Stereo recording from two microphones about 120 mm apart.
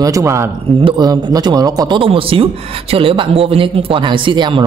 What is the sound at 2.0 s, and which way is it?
Speech, 50° right (ahead or behind).